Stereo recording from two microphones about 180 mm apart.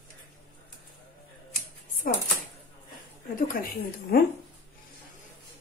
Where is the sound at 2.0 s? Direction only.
50° left (ahead or behind).